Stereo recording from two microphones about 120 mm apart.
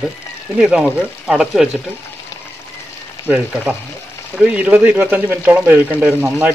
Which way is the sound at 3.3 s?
10° right (ahead or behind).